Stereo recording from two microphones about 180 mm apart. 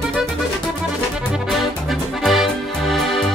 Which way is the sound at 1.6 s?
Centre (ahead or behind).